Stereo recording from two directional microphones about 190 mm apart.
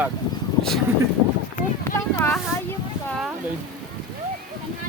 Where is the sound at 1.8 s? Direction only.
15° left (ahead or behind).